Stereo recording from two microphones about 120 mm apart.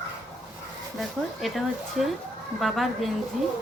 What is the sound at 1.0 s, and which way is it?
Speech, centre (ahead or behind).